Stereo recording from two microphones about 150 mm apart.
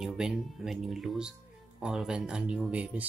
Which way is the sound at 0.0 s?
5° right (ahead or behind).